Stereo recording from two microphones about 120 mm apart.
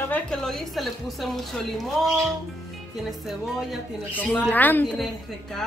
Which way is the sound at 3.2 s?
Centre (ahead or behind).